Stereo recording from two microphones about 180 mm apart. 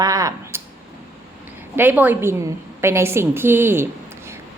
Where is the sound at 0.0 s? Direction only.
20° right (ahead or behind).